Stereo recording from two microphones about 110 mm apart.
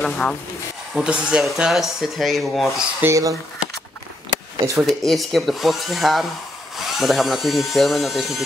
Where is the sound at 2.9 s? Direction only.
25° right (ahead or behind).